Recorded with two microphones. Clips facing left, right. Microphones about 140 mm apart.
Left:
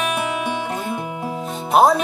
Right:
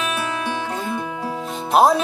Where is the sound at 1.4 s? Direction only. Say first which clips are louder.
Left 1 dB; centre (ahead or behind).